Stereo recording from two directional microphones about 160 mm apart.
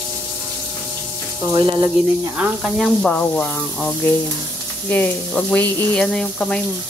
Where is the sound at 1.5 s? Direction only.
30° right (ahead or behind).